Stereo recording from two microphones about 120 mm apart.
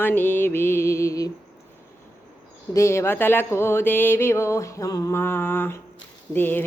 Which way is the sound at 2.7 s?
25° left (ahead or behind).